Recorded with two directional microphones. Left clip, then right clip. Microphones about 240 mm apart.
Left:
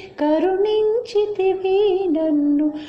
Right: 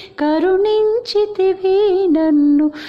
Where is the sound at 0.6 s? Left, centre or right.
Right.